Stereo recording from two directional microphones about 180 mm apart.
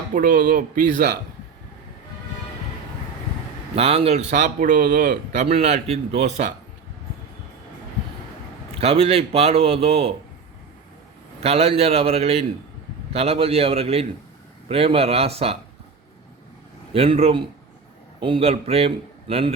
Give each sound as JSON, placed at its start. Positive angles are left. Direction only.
{"t": 0.1, "sound": "speech", "side_deg": -50}
{"t": 3.8, "sound": "a man's voice", "side_deg": -35}
{"t": 5.5, "sound": "a man's voice", "side_deg": -35}
{"t": 8.8, "sound": "a man's voice", "side_deg": -35}
{"t": 11.4, "sound": "a man's voice", "side_deg": -35}
{"t": 16.9, "sound": "a man's voice", "side_deg": -30}